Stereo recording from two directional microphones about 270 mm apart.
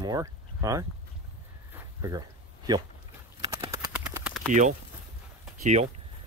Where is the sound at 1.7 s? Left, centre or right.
Centre.